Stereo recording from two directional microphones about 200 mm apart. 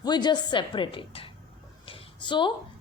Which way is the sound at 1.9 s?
25° left (ahead or behind).